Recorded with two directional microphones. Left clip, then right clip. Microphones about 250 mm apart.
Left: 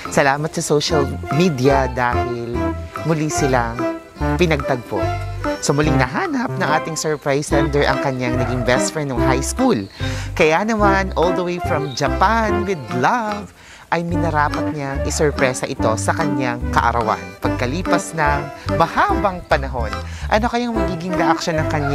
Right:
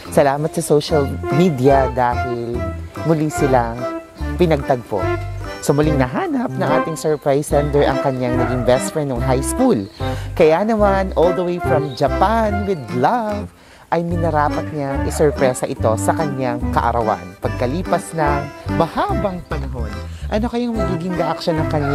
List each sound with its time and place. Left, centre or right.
0.1 s speech: left
3.4 s speech: left
20.2 s speech: left